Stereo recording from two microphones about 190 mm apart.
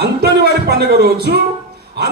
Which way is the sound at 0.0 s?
55° right (ahead or behind).